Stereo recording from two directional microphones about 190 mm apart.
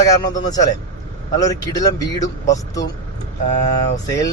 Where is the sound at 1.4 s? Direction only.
20° left (ahead or behind).